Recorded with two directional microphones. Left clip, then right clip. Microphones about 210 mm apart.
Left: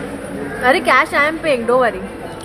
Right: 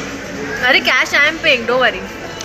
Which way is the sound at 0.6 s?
25° left (ahead or behind).